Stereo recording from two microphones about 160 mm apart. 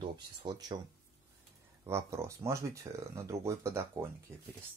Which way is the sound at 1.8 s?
15° right (ahead or behind).